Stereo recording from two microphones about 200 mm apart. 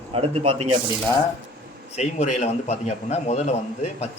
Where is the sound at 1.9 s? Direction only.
35° left (ahead or behind).